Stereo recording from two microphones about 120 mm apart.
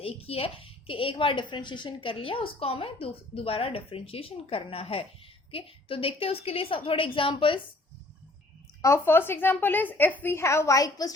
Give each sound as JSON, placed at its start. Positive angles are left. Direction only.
{"t": 0.0, "sound": "a woman's voice", "side_deg": 55}
{"t": 8.8, "sound": "a woman's voice", "side_deg": 20}